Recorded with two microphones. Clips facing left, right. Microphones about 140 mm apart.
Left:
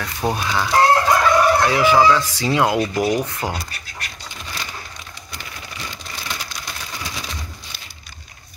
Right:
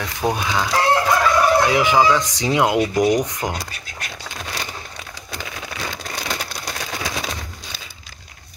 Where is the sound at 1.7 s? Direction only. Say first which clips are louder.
Left 1 dB; 20° right (ahead or behind).